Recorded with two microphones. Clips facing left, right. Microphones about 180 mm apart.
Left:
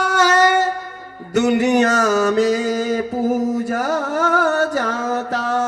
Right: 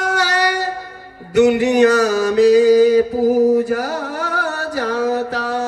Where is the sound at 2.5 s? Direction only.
35° right (ahead or behind).